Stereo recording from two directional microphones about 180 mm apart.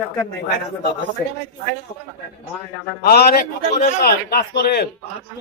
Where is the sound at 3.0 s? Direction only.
60° left (ahead or behind).